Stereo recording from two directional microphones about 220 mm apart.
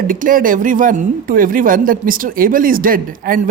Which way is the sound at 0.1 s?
40° right (ahead or behind).